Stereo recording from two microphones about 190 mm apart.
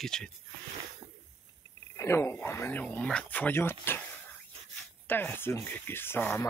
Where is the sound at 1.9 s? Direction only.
15° left (ahead or behind).